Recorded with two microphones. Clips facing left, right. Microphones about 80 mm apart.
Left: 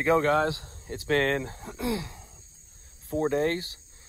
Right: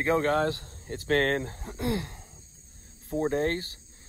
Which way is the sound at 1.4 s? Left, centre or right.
Left.